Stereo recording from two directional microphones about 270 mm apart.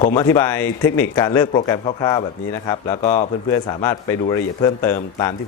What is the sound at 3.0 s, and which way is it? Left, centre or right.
Speech, left.